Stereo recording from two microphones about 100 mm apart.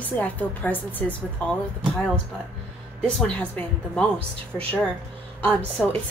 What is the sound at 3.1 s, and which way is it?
A woman's voice, 10° left (ahead or behind).